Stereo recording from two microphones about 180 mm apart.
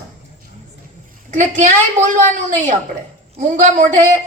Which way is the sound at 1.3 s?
45° right (ahead or behind).